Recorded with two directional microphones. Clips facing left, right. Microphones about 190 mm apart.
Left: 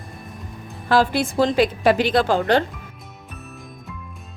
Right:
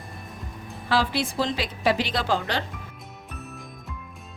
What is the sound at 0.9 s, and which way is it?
A woman's voice, 50° left (ahead or behind).